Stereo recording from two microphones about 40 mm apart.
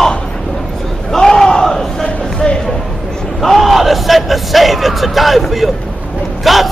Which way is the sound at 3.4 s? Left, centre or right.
Centre.